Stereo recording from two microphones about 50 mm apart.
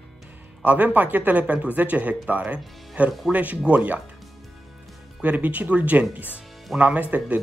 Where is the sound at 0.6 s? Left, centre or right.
Right.